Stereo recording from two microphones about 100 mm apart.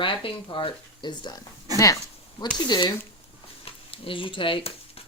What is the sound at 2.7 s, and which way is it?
Speech, 45° left (ahead or behind).